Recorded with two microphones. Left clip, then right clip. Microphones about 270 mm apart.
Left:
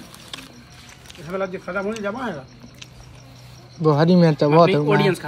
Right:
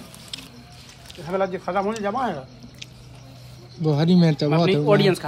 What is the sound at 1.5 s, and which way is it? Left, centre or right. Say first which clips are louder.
Speech: right 2 dB; right.